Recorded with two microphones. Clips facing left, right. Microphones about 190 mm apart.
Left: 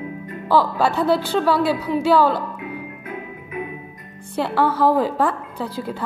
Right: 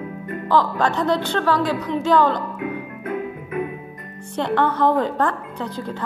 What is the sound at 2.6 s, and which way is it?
Music, 55° right (ahead or behind).